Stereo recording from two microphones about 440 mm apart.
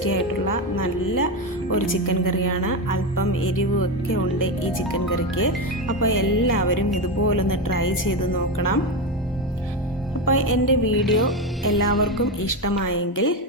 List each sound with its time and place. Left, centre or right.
0.0 s speech: left
10.2 s speech: left
11.0 s speech: centre
12.4 s speech: left